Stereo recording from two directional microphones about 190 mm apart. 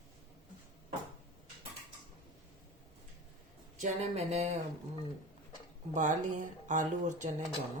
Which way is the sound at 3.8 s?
35° right (ahead or behind).